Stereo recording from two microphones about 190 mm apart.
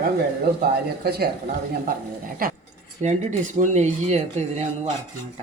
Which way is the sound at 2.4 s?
50° right (ahead or behind).